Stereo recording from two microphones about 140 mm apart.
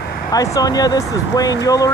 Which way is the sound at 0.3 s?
25° left (ahead or behind).